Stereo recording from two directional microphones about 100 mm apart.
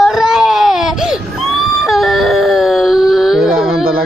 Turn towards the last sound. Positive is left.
turn(degrees=-5)  # may be behind; listen again after turning